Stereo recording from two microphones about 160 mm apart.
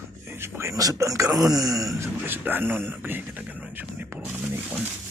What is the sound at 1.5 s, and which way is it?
Groan, 20° right (ahead or behind).